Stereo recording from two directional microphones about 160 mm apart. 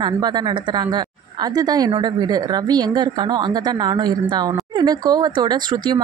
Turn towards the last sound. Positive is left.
turn(degrees=-25)  # may be behind; listen again after turning